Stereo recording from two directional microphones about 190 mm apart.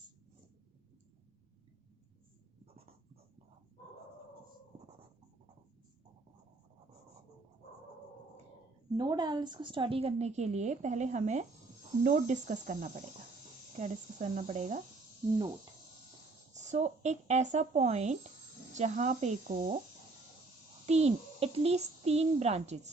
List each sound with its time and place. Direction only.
9.0 s a woman's voice: 20° right (ahead or behind); by 14.8 s 40° right (ahead or behind)
16.5 s a woman's voice: 40° right (ahead or behind)
20.8 s a woman's voice: 35° right (ahead or behind)